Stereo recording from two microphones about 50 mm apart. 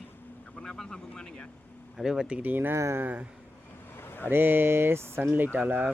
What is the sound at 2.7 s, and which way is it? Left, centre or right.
Speech, right.